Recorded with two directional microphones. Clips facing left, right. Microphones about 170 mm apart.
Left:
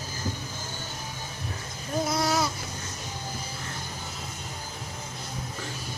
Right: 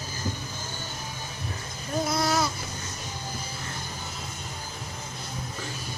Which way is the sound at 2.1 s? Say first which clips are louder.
Right 1 dB; 15° left (ahead or behind).